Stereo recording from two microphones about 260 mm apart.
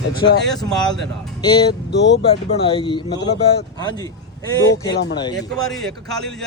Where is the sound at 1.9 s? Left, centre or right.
Left.